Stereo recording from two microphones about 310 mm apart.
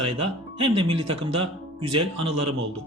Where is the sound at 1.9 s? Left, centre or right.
Right.